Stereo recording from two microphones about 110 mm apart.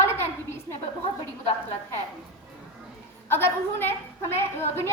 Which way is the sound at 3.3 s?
20° left (ahead or behind).